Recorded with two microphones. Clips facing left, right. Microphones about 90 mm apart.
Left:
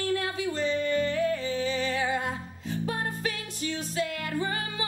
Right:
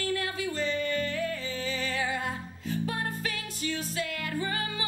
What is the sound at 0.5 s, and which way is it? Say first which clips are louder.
Music: left 4 dB; 25° left (ahead or behind).